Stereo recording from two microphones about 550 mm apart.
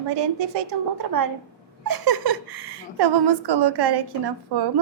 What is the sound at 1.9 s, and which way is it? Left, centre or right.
Laughter, right.